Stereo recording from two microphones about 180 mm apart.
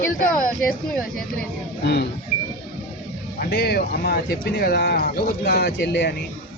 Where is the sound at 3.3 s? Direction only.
65° left (ahead or behind).